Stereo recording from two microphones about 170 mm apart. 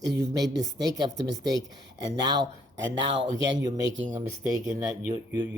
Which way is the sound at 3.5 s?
25° right (ahead or behind).